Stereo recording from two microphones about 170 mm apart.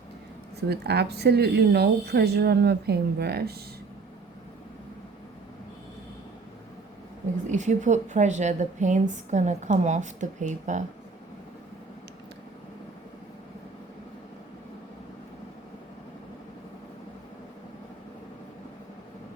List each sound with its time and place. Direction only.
0.7 s speech: 75° right (ahead or behind)
7.5 s a woman's voice: 45° right (ahead or behind)